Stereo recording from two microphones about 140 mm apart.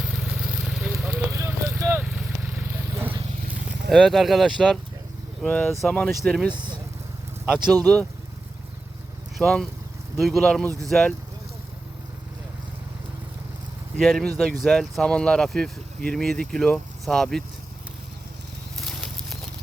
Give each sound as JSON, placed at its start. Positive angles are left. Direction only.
{"t": 0.0, "sound": "vehicle", "side_deg": -5}
{"t": 1.3, "sound": "a sound", "side_deg": -20}
{"t": 3.7, "sound": "speech", "side_deg": 0}
{"t": 5.5, "sound": "speech", "side_deg": 10}
{"t": 6.5, "sound": "speech", "side_deg": -35}
{"t": 7.4, "sound": "speech", "side_deg": -5}
{"t": 9.4, "sound": "speech", "side_deg": 0}
{"t": 14.0, "sound": "speech", "side_deg": 0}
{"t": 18.8, "sound": "a sound", "side_deg": 0}